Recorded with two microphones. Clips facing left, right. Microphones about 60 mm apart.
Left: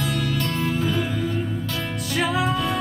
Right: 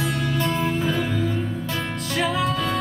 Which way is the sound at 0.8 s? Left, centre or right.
Centre.